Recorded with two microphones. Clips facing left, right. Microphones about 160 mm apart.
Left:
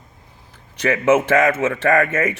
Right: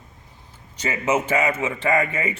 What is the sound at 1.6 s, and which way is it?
Speech, 80° left.